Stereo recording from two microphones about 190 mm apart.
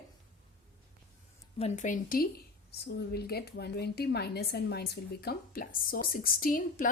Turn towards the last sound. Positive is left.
turn(degrees=45)  # may be behind; listen again after turning